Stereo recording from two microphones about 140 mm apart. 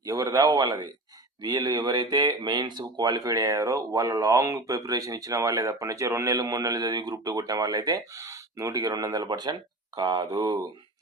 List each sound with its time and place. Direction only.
0.1 s speech: 25° right (ahead or behind)